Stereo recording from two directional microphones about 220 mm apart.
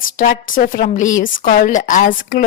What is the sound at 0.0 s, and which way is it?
A woman's voice, 35° left (ahead or behind).